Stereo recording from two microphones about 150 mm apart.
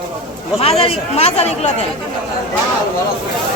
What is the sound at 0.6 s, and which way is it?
Speech, 40° left (ahead or behind).